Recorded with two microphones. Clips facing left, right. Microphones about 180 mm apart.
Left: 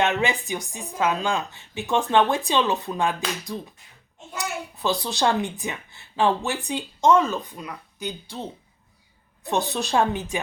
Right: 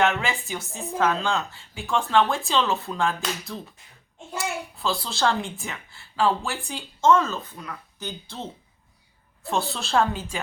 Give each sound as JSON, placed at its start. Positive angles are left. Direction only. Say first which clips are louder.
{"t": 0.0, "sound": "a child's voice", "louder": "left 1 dB", "side_deg": 20}